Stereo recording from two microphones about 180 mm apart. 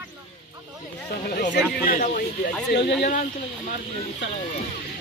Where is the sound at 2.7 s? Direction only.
70° left (ahead or behind).